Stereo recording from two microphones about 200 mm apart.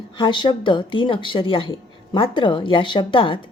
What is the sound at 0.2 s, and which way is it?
A woman's voice, 25° left (ahead or behind).